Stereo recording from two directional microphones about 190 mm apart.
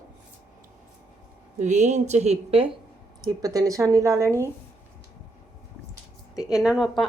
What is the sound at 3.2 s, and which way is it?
A woman's voice, 20° right (ahead or behind).